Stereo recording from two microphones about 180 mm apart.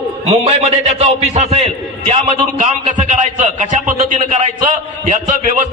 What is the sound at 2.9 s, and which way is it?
A man's voice, 45° right (ahead or behind).